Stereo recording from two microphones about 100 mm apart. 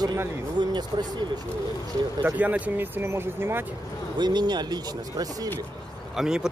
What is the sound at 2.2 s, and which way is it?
Speech, 15° right (ahead or behind).